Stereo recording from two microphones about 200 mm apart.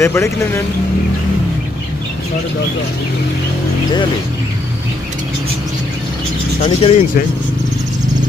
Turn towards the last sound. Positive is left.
turn(degrees=30)  # may be behind; listen again after turning